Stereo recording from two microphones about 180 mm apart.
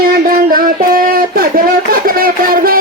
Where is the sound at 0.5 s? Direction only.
50° right (ahead or behind).